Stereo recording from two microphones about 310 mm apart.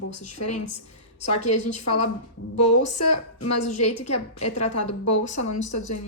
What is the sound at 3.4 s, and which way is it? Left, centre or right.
A woman's voice, left.